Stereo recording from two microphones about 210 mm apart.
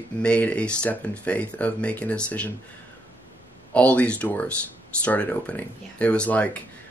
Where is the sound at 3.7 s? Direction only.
5° left (ahead or behind).